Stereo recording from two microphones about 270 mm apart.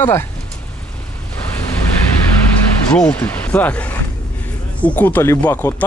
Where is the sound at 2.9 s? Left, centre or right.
Centre.